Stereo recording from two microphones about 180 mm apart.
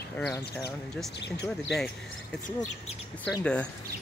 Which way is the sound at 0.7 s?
75° left (ahead or behind).